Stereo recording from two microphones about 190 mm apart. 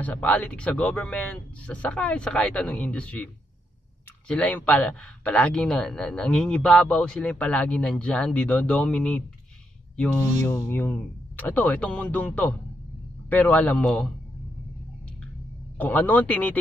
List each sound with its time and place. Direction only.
0.0 s speech: 10° left (ahead or behind)
4.3 s a man's voice: 5° left (ahead or behind)
10.4 s speech: 10° left (ahead or behind)
15.8 s speech: 10° left (ahead or behind)